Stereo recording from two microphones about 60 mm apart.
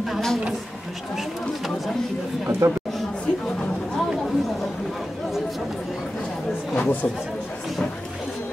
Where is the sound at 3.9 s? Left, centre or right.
Centre.